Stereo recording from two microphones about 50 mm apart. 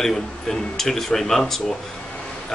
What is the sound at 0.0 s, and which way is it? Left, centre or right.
Speech, centre.